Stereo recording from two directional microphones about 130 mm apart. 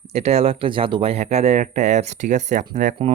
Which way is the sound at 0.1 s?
55° right (ahead or behind).